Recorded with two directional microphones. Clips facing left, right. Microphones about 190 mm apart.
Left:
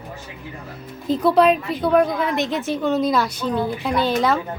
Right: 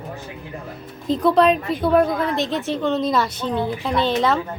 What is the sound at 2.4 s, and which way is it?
Speech, 15° left (ahead or behind).